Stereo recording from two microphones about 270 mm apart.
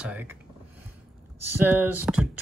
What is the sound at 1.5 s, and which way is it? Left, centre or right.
Speech, centre.